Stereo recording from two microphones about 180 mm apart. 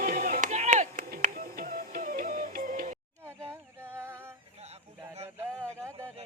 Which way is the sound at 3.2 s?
15° right (ahead or behind).